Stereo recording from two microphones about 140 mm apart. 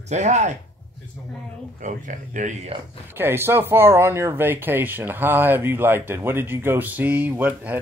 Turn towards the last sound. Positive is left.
turn(degrees=-15)  # may be behind; listen again after turning